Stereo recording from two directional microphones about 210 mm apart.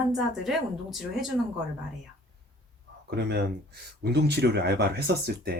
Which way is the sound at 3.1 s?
50° right (ahead or behind).